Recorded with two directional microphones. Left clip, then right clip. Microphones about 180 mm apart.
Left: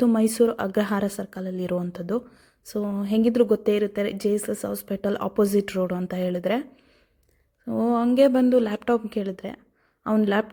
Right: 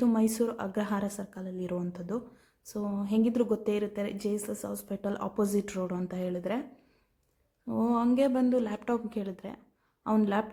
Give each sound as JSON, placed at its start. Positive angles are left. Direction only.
{"t": 0.0, "sound": "a woman's voice", "side_deg": 30}
{"t": 7.7, "sound": "a woman's voice", "side_deg": 25}